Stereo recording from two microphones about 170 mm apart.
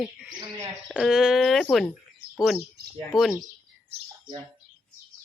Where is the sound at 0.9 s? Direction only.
Centre (ahead or behind).